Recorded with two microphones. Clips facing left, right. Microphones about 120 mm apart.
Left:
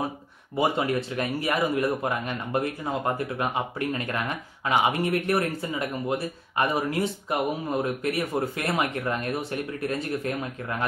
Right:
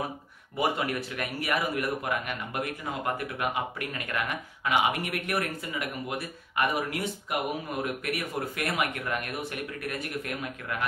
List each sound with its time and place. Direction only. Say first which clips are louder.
0.6 s speech: left 4 dB; 25° left (ahead or behind)